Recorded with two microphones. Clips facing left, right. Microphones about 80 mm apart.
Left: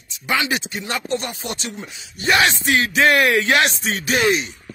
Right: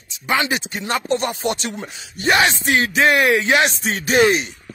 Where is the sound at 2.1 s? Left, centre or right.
Right.